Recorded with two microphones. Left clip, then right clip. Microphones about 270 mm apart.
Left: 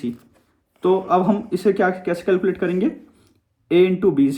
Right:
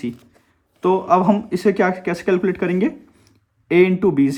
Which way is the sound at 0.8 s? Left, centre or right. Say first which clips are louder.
Right 1 dB; right.